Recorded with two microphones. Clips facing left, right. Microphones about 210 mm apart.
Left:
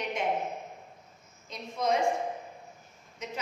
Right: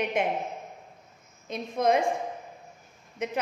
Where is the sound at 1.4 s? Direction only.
55° right (ahead or behind).